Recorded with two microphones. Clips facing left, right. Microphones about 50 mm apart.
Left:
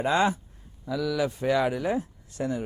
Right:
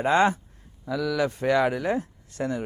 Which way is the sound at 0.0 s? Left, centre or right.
Right.